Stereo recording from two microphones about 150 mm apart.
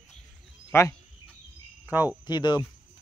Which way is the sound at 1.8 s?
10° right (ahead or behind).